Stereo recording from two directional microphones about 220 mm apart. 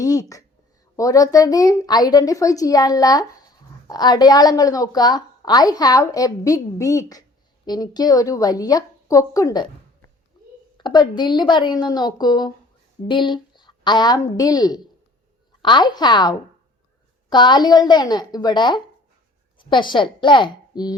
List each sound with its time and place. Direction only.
0.0 s a woman's voice: 15° left (ahead or behind)
10.8 s a woman's voice: 20° left (ahead or behind)